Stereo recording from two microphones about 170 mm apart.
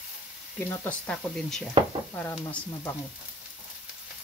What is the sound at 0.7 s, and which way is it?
Speech, 10° left (ahead or behind).